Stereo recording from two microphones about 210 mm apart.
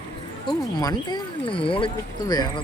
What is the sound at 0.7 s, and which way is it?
Speech, 20° left (ahead or behind).